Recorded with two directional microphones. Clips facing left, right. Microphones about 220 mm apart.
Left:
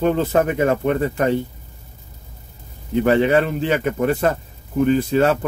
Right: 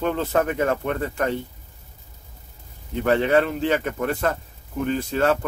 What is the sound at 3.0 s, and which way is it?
Speech, 10° left (ahead or behind).